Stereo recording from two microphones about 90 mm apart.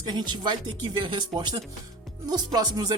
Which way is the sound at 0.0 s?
55° right (ahead or behind).